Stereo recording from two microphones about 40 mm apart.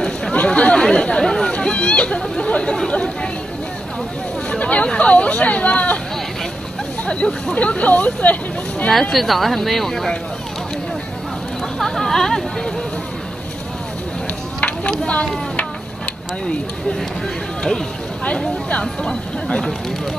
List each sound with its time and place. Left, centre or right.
0.3 s chatter: left
0.7 s speech: centre
4.5 s speech: left
7.1 s speech: left
9.1 s speech: centre
11.8 s speech: centre
14.6 s speech: left
19.0 s speech: centre